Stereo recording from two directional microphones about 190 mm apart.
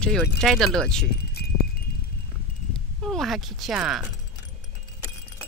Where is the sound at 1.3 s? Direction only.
55° left (ahead or behind).